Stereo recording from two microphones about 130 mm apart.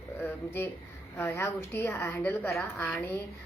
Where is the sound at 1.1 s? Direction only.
20° left (ahead or behind).